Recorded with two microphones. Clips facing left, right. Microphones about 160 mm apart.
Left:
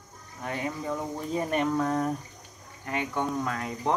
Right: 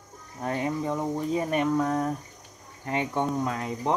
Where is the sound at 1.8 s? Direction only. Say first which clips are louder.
Right 1 dB; centre (ahead or behind).